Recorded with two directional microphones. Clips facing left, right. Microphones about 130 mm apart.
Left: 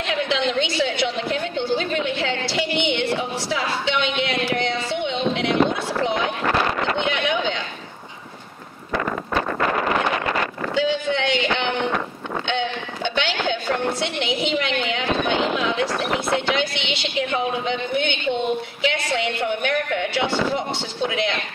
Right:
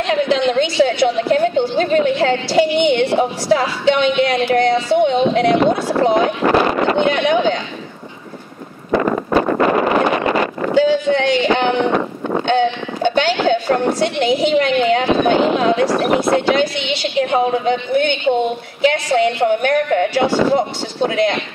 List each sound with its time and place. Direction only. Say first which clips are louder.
0.1 s speech: right 7 dB; 45° right (ahead or behind)
9.3 s wind noise: right 8 dB; 25° right (ahead or behind)
10.7 s speech: right 8 dB; 45° right (ahead or behind)